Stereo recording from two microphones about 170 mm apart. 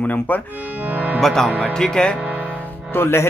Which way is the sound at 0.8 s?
10° right (ahead or behind).